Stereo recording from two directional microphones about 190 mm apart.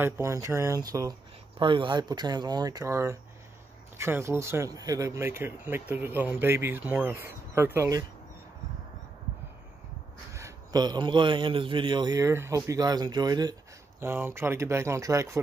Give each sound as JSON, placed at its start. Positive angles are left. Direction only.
{"t": 0.0, "sound": "a man's voice", "side_deg": -15}
{"t": 10.3, "sound": "a man's voice", "side_deg": -20}